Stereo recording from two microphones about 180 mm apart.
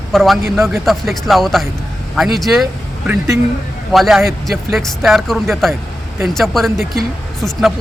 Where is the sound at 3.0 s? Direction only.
15° right (ahead or behind).